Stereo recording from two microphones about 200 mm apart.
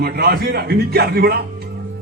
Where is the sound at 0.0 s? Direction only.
55° right (ahead or behind).